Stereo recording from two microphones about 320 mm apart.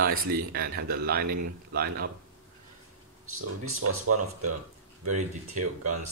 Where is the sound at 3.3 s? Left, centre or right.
Right.